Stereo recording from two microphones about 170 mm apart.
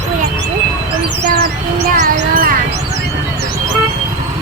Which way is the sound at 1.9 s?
55° right (ahead or behind).